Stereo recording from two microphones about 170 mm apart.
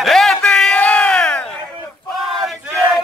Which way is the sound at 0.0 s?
Centre (ahead or behind).